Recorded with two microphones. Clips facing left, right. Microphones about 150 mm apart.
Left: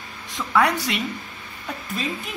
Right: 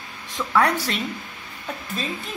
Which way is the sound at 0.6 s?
10° left (ahead or behind).